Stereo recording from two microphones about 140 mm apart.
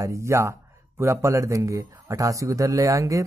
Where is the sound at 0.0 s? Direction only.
20° right (ahead or behind).